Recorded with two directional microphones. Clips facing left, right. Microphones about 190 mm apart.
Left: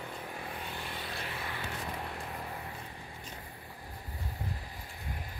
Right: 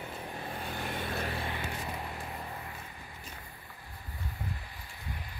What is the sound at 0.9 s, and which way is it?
Vehicle, 50° right (ahead or behind).